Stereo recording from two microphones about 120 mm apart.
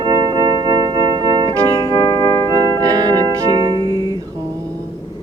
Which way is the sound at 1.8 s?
30° left (ahead or behind).